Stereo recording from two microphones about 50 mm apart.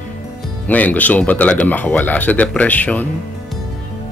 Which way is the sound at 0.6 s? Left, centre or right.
Left.